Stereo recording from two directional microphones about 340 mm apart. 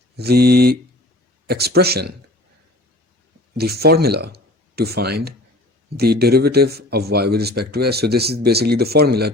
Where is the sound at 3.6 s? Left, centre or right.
Right.